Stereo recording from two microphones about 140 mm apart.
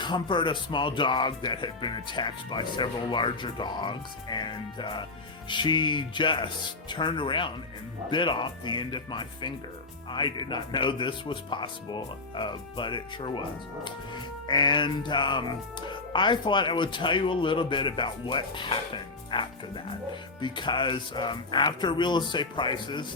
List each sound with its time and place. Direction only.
0.0 s speech: 35° left (ahead or behind)